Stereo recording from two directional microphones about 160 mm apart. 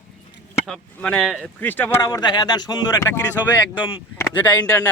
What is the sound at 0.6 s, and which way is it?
Speech, 5° left (ahead or behind).